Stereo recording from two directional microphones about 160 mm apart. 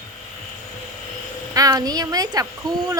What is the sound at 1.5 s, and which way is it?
Speech, 25° right (ahead or behind).